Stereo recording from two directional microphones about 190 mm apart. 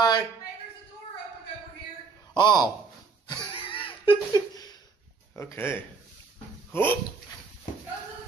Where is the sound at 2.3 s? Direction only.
25° left (ahead or behind).